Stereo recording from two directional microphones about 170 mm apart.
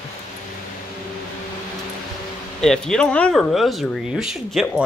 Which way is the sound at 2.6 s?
5° left (ahead or behind).